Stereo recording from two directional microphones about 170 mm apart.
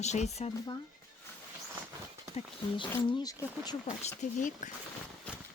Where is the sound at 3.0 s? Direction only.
25° left (ahead or behind).